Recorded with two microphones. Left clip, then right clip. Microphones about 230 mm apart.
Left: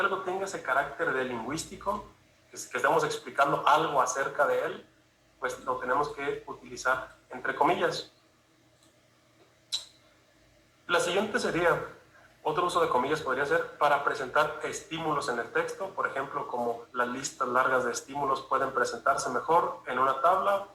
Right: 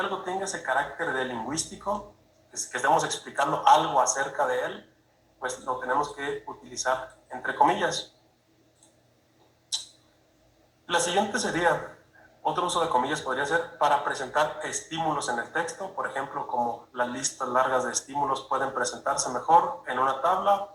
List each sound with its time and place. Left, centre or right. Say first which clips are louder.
0.0 s speech: even; right
10.8 s speech: right 2 dB; right